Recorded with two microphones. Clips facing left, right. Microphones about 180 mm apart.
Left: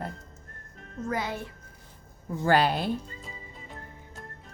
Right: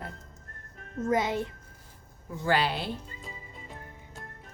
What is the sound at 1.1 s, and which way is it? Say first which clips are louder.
Speech: right 5 dB; 20° right (ahead or behind).